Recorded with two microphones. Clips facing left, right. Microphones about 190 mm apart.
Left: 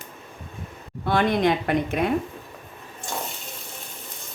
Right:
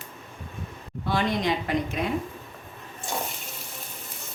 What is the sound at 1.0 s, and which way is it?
A woman's voice, 55° left (ahead or behind).